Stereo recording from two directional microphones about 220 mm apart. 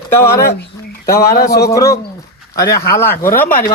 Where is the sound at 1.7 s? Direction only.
15° left (ahead or behind).